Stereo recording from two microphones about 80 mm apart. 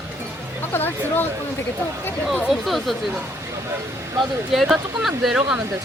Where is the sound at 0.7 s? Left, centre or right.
Left.